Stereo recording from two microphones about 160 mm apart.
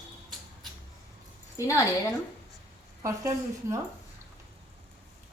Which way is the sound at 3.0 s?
20° right (ahead or behind).